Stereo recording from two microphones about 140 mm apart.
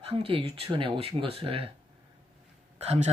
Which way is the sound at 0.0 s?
40° right (ahead or behind).